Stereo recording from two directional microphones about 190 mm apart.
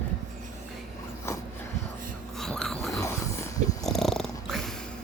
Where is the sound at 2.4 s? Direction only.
Centre (ahead or behind).